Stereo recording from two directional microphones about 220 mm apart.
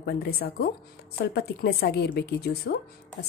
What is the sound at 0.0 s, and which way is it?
A woman's voice, 45° left (ahead or behind).